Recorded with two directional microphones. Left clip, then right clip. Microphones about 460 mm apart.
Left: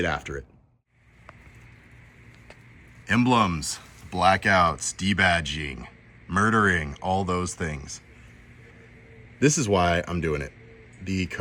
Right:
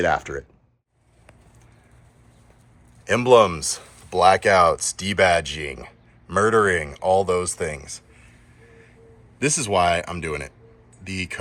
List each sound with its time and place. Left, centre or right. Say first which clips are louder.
0.0 s speech: right 6 dB; centre
3.1 s speech: right 7 dB; centre
9.4 s speech: right 2 dB; centre